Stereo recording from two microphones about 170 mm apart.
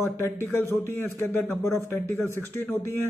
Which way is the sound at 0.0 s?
15° left (ahead or behind).